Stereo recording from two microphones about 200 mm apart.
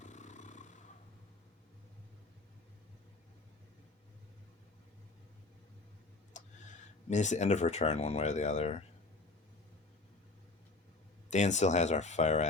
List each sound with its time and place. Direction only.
0.0 s a sound: 35° left (ahead or behind)
6.3 s speech: 35° left (ahead or behind)
11.3 s speech: 35° left (ahead or behind)